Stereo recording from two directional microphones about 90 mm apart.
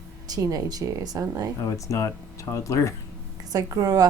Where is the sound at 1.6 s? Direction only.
35° left (ahead or behind).